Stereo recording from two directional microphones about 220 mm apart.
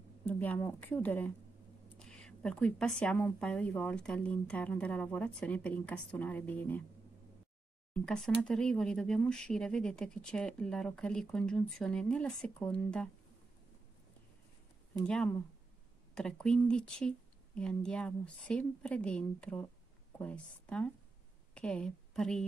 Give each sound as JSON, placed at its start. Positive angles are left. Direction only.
{"t": 0.2, "sound": "speech", "side_deg": 10}
{"t": 7.9, "sound": "speech", "side_deg": 5}
{"t": 15.0, "sound": "a woman's voice", "side_deg": 5}